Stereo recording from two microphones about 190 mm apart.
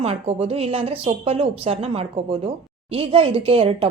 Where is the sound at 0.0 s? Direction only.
30° right (ahead or behind).